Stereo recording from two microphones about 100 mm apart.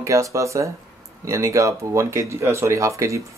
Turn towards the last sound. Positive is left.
turn(degrees=-30)  # may be behind; listen again after turning